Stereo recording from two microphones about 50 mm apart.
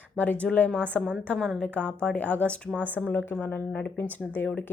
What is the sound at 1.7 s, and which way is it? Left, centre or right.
Speech, centre.